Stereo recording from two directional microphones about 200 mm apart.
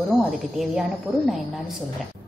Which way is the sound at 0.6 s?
Centre (ahead or behind).